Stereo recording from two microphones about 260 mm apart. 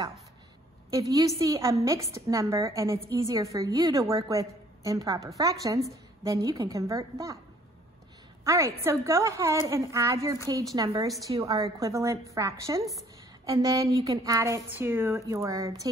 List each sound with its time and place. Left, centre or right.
0.8 s a woman's voice: centre
8.5 s speech: centre